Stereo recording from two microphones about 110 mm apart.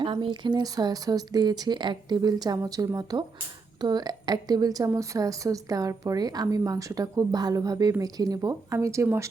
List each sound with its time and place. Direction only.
0.0 s a woman's voice: 50° right (ahead or behind); by 9.3 s 25° right (ahead or behind)